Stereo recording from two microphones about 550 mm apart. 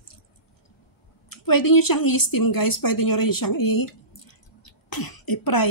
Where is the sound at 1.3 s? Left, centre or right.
Left.